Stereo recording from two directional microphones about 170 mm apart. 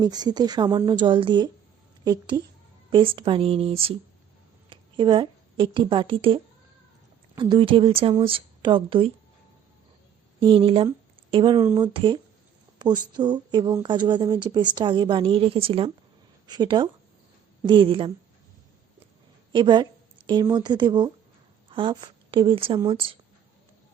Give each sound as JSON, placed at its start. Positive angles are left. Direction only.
{"t": 0.0, "sound": "a woman's voice", "side_deg": -25}
{"t": 10.4, "sound": "a woman's voice", "side_deg": -30}
{"t": 11.6, "sound": "speech", "side_deg": -20}
{"t": 11.9, "sound": "a woman's voice", "side_deg": -30}
{"t": 19.5, "sound": "a woman's voice", "side_deg": -25}